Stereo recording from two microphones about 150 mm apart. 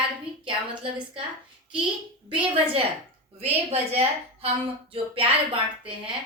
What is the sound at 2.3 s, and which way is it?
Speech, 40° right (ahead or behind).